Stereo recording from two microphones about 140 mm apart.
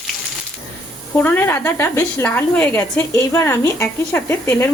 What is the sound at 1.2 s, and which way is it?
A woman's voice, 15° left (ahead or behind).